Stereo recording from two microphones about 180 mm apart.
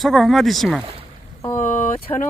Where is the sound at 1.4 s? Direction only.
10° left (ahead or behind).